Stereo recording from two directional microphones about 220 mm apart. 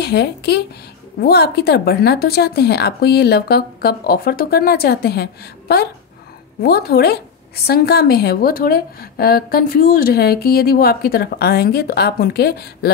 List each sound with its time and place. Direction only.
0.0 s a woman's voice: 50° left (ahead or behind)